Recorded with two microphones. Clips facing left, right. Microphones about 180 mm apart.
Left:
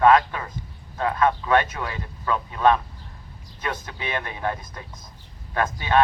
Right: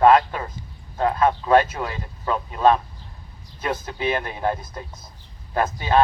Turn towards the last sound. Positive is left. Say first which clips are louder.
# right 2 dB
turn(degrees=-30)  # may be behind; listen again after turning